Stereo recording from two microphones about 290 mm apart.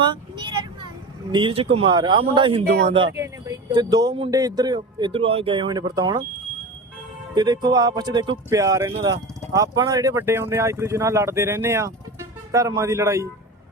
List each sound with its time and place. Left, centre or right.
1.3 s speech: centre
7.3 s speech: centre